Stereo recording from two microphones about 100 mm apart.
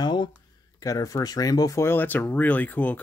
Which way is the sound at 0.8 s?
35° left (ahead or behind).